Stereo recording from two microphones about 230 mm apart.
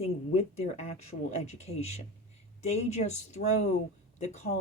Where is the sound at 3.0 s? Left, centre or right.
Left.